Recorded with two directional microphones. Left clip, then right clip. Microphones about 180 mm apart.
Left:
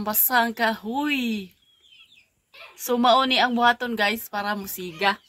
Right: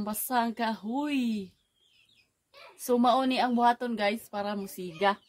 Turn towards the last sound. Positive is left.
turn(degrees=15)  # may be behind; listen again after turning